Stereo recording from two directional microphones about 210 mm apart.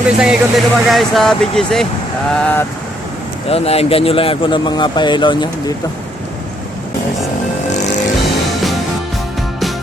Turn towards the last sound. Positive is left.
turn(degrees=35)  # may be behind; listen again after turning